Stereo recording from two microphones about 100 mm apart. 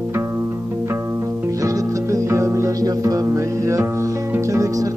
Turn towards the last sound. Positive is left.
turn(degrees=-35)  # may be behind; listen again after turning